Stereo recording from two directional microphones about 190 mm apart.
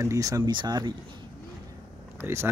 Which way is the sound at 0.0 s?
15° right (ahead or behind).